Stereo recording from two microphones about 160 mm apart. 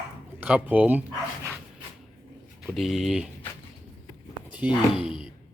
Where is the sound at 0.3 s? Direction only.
10° right (ahead or behind).